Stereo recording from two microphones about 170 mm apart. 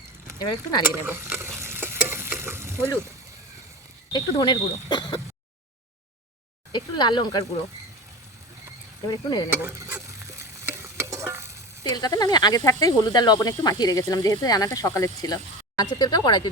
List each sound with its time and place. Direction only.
0.3 s speech: 25° left (ahead or behind)
0.9 s stir: 10° right (ahead or behind)
4.1 s speech: 25° left (ahead or behind)
6.7 s speech: 25° left (ahead or behind)
9.0 s speech: 25° left (ahead or behind)
9.5 s stir: 10° right (ahead or behind)
11.8 s speech: 25° left (ahead or behind)